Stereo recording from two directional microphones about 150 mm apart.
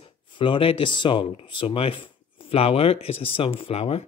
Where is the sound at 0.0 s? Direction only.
35° left (ahead or behind).